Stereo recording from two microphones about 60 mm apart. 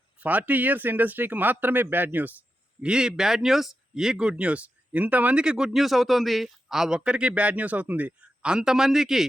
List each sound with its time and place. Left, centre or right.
0.2 s speech: right
2.8 s a man's voice: centre
5.4 s a man's voice: centre